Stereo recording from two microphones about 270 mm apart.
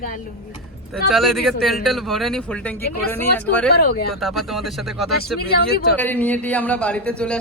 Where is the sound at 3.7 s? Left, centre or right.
Left.